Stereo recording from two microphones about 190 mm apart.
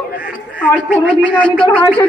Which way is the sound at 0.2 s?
5° right (ahead or behind).